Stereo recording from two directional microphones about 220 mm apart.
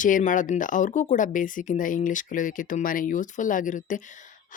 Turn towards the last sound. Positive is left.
turn(degrees=35)  # may be behind; listen again after turning